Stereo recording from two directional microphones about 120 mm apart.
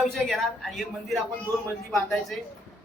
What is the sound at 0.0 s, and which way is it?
A woman's voice, centre (ahead or behind).